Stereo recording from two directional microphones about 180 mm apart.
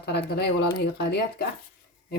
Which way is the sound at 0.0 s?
65° left (ahead or behind).